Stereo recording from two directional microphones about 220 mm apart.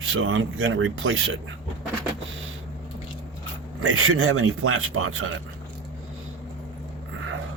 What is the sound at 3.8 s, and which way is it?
Speech, 70° right (ahead or behind).